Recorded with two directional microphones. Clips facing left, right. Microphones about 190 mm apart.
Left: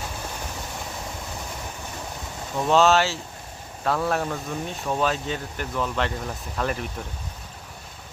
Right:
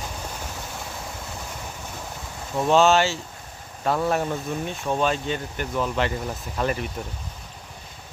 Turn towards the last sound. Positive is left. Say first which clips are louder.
# right 2 dB
turn(degrees=0)  # may be behind; listen again after turning